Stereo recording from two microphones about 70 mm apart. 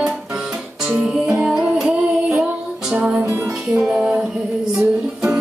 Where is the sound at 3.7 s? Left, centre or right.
Centre.